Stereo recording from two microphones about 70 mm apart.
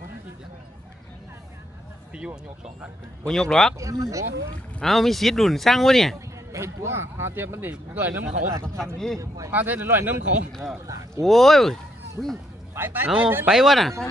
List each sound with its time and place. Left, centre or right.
3.3 s speech: centre
3.8 s speech: right
4.8 s speech: centre
6.1 s speech: right
7.7 s speech: right
8.5 s a man's voice: right
9.5 s speech: right
10.5 s speech: centre
12.7 s a man's voice: right
13.5 s speech: centre